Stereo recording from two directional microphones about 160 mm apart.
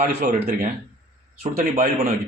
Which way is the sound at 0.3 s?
50° right (ahead or behind).